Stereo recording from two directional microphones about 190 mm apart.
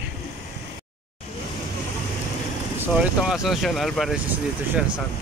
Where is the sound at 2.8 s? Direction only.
5° right (ahead or behind).